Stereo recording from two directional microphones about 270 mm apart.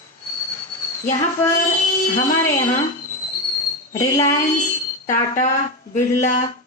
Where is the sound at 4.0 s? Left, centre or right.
Centre.